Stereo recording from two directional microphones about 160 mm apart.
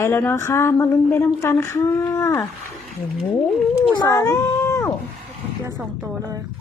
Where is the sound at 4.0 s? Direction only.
20° left (ahead or behind).